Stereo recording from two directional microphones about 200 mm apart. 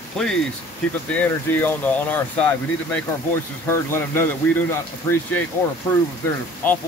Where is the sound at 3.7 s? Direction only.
10° left (ahead or behind).